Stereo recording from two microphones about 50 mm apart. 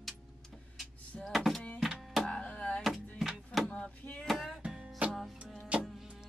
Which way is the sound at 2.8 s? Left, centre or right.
Centre.